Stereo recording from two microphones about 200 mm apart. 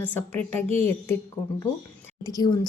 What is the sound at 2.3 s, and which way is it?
Speech, 20° left (ahead or behind).